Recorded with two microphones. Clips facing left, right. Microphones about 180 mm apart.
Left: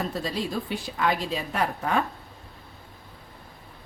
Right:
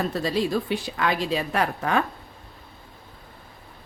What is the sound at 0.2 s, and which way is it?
A woman's voice, 80° right.